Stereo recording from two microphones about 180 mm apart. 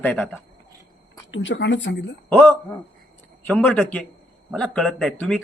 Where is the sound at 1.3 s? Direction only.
90° left.